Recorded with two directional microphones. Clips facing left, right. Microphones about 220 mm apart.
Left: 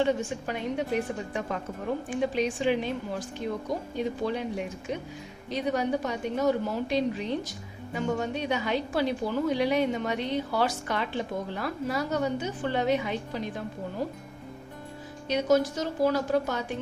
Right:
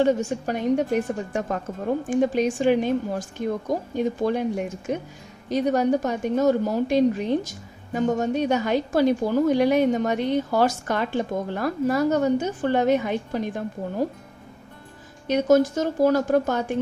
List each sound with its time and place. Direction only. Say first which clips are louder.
0.0 s a woman's voice: right 5 dB; 40° right (ahead or behind)
15.3 s a woman's voice: right 6 dB; 50° right (ahead or behind)